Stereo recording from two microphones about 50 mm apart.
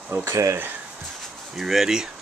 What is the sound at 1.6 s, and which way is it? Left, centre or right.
Speech, centre.